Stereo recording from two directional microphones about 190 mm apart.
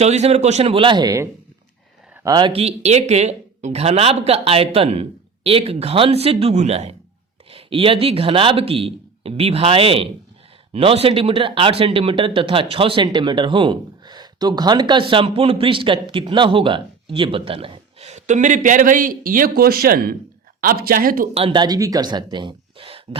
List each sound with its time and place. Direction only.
0.0 s speech: 35° right (ahead or behind)
21.3 s speech: 25° right (ahead or behind)